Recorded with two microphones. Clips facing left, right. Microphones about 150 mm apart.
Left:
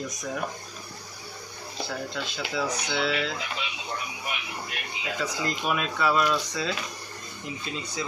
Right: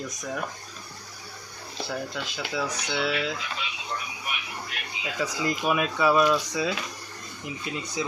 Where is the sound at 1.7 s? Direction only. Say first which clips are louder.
Right 1 dB; centre (ahead or behind).